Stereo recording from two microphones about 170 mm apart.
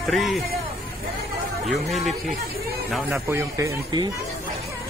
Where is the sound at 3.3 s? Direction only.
15° right (ahead or behind).